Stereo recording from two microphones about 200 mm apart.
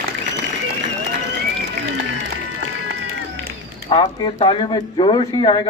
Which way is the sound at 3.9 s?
20° left (ahead or behind).